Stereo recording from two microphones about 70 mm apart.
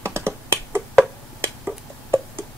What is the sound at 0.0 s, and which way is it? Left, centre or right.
Finger snapping, right.